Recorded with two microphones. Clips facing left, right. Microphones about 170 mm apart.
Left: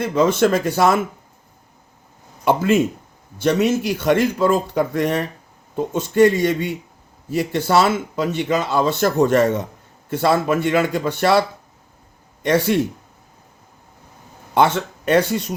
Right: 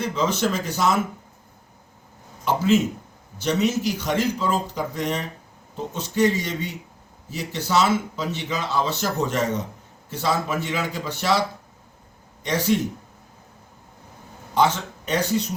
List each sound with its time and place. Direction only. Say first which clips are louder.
0.0 s speech: left 7 dB; 55° left (ahead or behind)
2.4 s speech: left 3 dB; 55° left (ahead or behind)
12.4 s a man's voice: left 5 dB; 55° left (ahead or behind)
14.5 s speech: left 4 dB; 55° left (ahead or behind)